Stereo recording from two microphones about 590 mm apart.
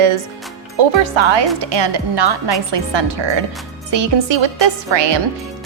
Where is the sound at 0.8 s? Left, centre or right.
Right.